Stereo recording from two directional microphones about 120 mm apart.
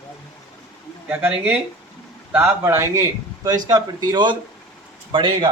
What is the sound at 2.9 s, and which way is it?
Speech, 30° right (ahead or behind).